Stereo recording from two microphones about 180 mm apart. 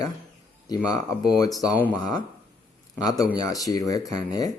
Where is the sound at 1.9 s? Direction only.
20° left (ahead or behind).